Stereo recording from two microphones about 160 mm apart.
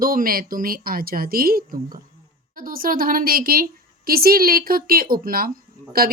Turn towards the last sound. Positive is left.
turn(degrees=-70)  # may be behind; listen again after turning